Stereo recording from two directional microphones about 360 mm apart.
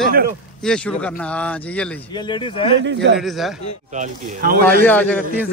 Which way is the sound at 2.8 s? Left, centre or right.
Right.